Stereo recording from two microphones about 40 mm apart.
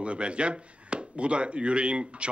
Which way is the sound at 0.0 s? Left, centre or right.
Right.